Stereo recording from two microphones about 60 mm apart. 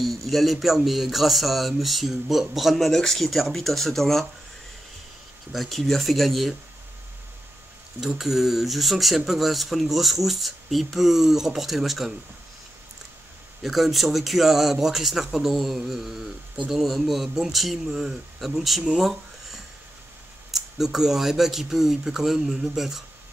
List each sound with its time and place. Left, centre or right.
0.0 s a man's voice: centre
5.5 s a man's voice: centre
8.0 s a man's voice: centre
13.6 s a man's voice: centre
18.9 s a sound: centre
20.5 s a man's voice: centre